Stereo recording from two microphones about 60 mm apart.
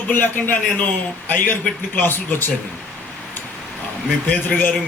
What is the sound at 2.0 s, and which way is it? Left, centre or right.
Speech, left.